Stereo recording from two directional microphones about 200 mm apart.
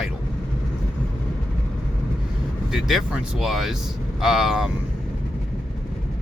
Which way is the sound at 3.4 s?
Centre (ahead or behind).